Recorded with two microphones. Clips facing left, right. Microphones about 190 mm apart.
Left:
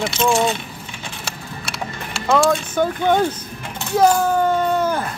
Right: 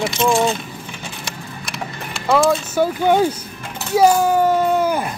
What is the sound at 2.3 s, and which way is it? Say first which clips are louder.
Speech: right 1 dB; 5° right (ahead or behind).